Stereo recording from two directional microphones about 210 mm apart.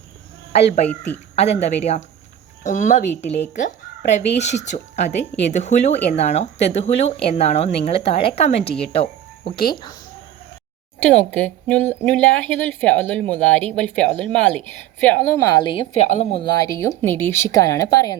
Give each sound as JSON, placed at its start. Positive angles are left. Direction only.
{"t": 0.5, "sound": "speech", "side_deg": 30}
{"t": 0.9, "sound": "a woman's voice", "side_deg": 10}
{"t": 1.4, "sound": "speech", "side_deg": 30}
{"t": 11.0, "sound": "a woman's voice", "side_deg": 5}